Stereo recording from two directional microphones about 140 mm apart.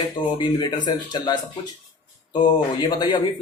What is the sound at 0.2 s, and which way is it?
Speech, 35° left (ahead or behind).